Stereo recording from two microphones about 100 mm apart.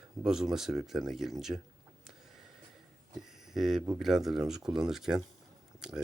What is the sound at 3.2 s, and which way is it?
Speech, 5° right (ahead or behind).